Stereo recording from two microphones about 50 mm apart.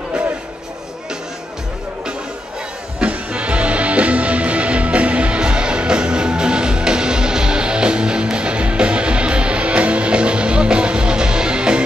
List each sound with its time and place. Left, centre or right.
3.0 s music: right